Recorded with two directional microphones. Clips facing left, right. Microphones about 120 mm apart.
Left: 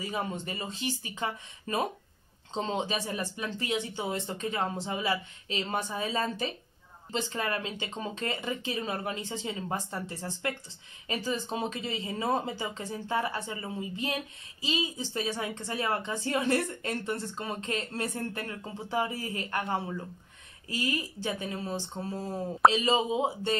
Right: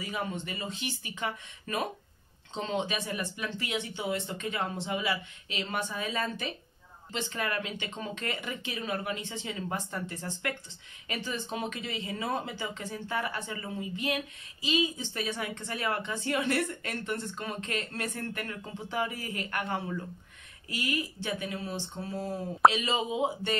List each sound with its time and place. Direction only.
0.0 s speech: 30° left (ahead or behind)